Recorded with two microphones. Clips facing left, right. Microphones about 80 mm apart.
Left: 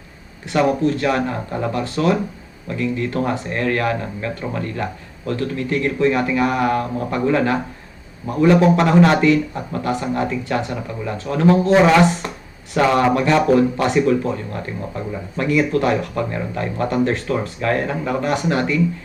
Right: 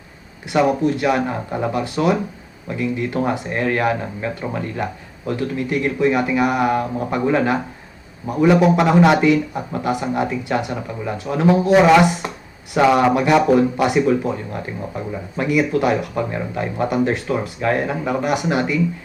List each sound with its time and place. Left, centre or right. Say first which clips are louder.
0.4 s speech: even; centre